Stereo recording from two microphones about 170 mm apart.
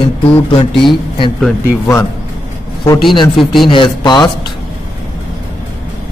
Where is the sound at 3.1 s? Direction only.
30° left (ahead or behind).